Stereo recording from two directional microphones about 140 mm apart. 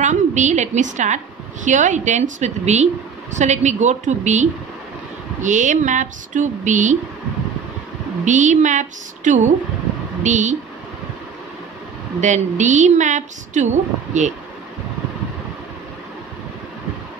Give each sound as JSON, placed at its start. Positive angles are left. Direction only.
{"t": 0.0, "sound": "a woman's voice", "side_deg": -60}
{"t": 8.3, "sound": "a woman's voice", "side_deg": -60}
{"t": 12.2, "sound": "a woman's voice", "side_deg": -60}